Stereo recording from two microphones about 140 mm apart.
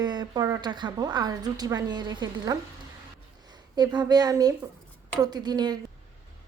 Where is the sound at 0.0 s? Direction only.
30° right (ahead or behind).